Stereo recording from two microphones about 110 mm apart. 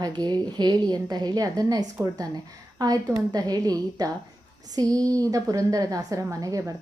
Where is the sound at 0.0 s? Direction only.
40° right (ahead or behind).